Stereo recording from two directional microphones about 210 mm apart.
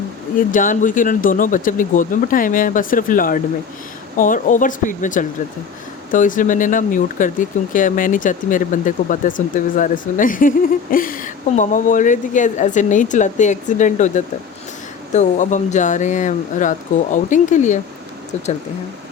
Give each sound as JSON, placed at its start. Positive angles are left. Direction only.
{"t": 0.3, "sound": "speech", "side_deg": 40}
{"t": 15.1, "sound": "speech", "side_deg": 35}